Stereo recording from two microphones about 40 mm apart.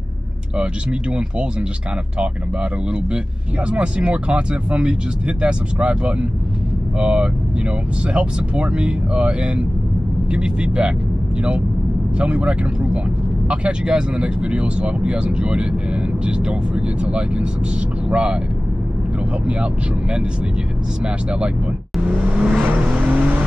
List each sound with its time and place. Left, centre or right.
3.7 s speech: right
12.2 s speech: right
19.4 s speech: right
22.0 s vehicle: right